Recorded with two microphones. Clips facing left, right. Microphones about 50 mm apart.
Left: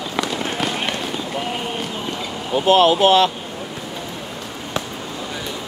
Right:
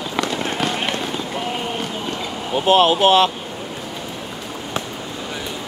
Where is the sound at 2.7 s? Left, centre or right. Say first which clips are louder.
Even; right.